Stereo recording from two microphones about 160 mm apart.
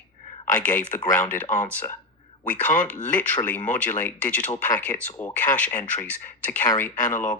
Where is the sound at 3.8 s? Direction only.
10° left (ahead or behind).